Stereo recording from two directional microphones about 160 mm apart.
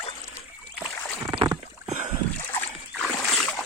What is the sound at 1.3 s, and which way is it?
Rowboat, 30° right (ahead or behind).